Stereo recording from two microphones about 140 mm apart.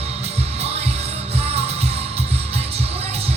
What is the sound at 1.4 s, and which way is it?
Music, 45° right (ahead or behind).